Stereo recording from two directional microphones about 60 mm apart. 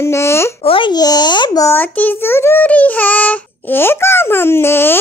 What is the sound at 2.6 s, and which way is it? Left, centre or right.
A child's voice, left.